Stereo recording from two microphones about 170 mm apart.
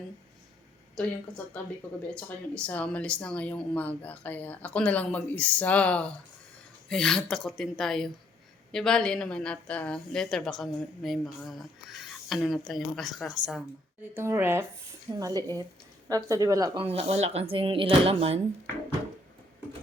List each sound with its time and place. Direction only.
1.0 s a woman's voice: 5° left (ahead or behind)
2.1 s a woman's voice: 5° left (ahead or behind)
14.1 s speech: 15° right (ahead or behind)
16.8 s speech: 35° right (ahead or behind)